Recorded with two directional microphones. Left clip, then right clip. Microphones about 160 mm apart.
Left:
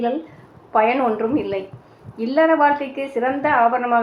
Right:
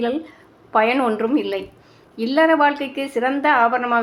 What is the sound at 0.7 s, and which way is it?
A woman's voice, 15° right (ahead or behind).